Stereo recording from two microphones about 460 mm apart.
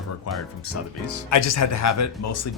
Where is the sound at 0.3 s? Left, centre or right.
Left.